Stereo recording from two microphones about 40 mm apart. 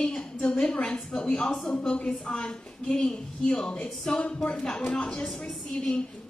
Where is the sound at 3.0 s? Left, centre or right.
Centre.